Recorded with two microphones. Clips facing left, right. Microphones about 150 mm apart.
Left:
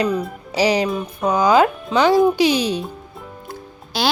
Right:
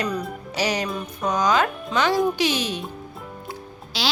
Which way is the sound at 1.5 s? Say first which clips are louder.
Left 7 dB; 10° left (ahead or behind).